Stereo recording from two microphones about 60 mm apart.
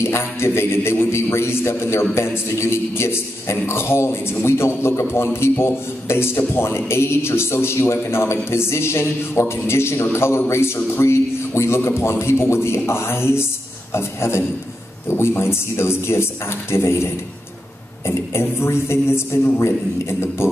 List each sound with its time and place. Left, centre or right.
0.0 s a man's voice: left